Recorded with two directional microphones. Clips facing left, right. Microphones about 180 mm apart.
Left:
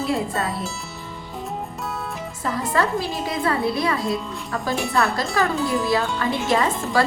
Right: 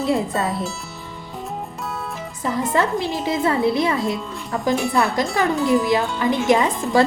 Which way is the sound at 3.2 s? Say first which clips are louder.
Right 5 dB; 20° right (ahead or behind).